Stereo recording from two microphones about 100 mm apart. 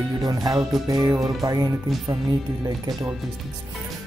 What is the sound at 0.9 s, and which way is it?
Speech, 40° right (ahead or behind).